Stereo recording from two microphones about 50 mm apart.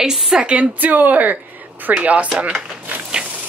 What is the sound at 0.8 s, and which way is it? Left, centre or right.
Speech, right.